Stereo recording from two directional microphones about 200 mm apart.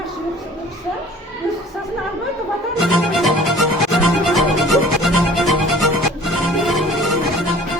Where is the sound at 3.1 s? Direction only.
Centre (ahead or behind).